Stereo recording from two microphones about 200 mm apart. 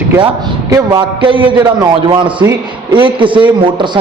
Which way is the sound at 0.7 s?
20° right (ahead or behind).